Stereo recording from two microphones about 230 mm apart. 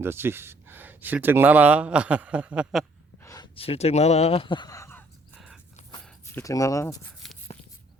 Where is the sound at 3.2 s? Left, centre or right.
Centre.